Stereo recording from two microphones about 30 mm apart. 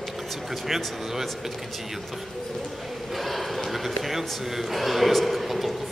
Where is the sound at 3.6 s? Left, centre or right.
Centre.